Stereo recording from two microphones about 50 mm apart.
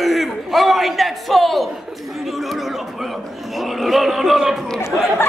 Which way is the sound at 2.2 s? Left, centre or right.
Centre.